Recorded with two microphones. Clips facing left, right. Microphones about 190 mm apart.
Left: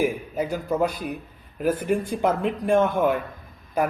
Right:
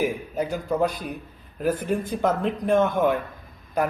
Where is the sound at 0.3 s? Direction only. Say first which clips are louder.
Right 1 dB; 10° left (ahead or behind).